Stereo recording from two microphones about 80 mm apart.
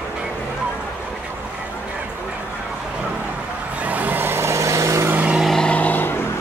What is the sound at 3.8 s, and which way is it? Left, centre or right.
Vehicle, right.